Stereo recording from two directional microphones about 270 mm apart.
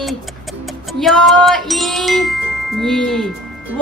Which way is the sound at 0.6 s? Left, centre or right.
Centre.